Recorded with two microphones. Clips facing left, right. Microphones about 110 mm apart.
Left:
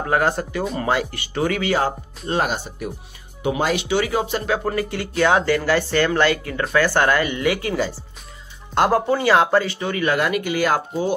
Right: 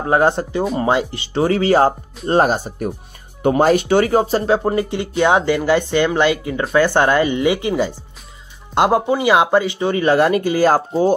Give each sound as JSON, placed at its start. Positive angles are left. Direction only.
{"t": 0.0, "sound": "speech", "side_deg": -25}
{"t": 4.6, "sound": "speech", "side_deg": -25}